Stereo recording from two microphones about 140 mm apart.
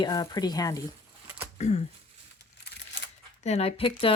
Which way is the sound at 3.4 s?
50° left (ahead or behind).